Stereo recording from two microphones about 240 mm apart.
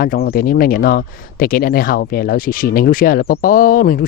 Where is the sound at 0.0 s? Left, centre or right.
Left.